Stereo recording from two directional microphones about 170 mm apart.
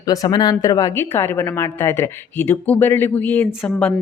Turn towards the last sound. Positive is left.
turn(degrees=10)  # may be behind; listen again after turning